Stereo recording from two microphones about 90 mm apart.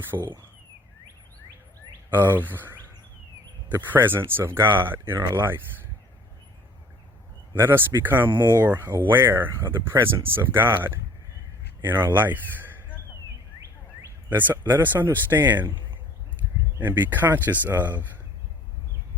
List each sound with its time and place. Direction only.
0.1 s speech: 45° right (ahead or behind)
2.3 s speech: 20° right (ahead or behind)
7.5 s speech: 25° right (ahead or behind)
14.3 s speech: 20° right (ahead or behind)
16.8 s speech: 20° right (ahead or behind)